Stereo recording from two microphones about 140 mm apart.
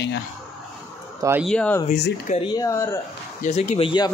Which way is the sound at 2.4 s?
30° left (ahead or behind).